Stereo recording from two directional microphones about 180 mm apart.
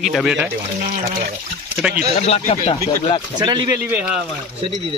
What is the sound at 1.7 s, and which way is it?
Speech, 5° right (ahead or behind).